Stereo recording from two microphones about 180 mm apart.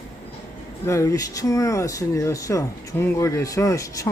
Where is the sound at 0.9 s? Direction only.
15° left (ahead or behind).